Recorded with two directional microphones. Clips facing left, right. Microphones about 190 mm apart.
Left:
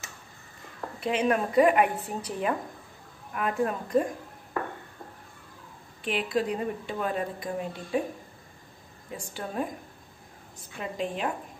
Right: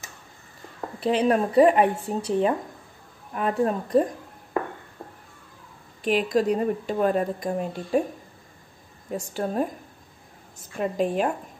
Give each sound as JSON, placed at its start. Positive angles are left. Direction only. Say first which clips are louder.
{"t": 0.7, "sound": "speech", "louder": "right 5 dB", "side_deg": -30}
{"t": 6.0, "sound": "speech", "louder": "right 6 dB", "side_deg": -40}
{"t": 9.1, "sound": "speech", "louder": "right 7 dB", "side_deg": -40}
{"t": 10.8, "sound": "speech", "louder": "right 7 dB", "side_deg": -45}